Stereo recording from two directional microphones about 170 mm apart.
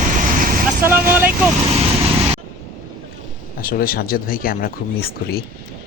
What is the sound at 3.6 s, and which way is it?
Speech, 60° left (ahead or behind).